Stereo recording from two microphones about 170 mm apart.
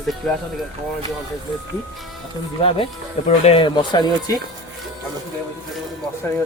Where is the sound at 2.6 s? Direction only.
35° left (ahead or behind).